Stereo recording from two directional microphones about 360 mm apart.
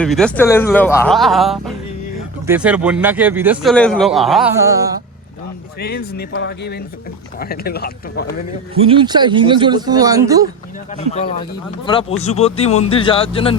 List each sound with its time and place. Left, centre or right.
0.0 s a man's voice: centre
5.8 s speech: left
8.7 s speech: centre
11.9 s speech: centre